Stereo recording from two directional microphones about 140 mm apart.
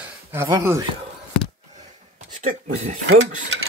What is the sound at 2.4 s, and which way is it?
Speech, 60° right (ahead or behind).